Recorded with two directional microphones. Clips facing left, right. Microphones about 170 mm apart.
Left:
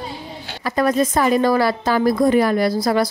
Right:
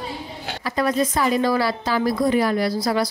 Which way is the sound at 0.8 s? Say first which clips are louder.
Left 4 dB; 50° left (ahead or behind).